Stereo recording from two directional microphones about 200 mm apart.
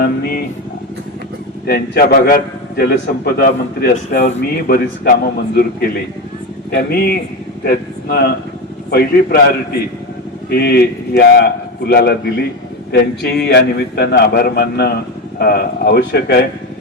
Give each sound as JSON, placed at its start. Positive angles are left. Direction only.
{"t": 0.0, "sound": "a man's voice", "side_deg": 45}
{"t": 1.6, "sound": "a man's voice", "side_deg": 50}
{"t": 10.5, "sound": "a man's voice", "side_deg": 55}